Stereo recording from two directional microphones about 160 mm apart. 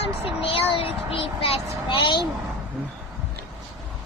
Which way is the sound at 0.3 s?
35° left (ahead or behind).